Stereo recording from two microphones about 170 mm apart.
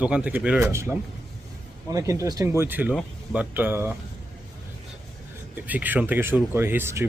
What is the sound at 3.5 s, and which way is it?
Speech, 10° right (ahead or behind).